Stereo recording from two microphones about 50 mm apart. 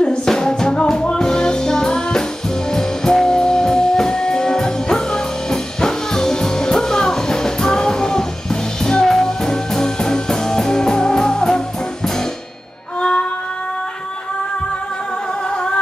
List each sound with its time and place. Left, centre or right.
0.0 s music: centre
13.0 s music: left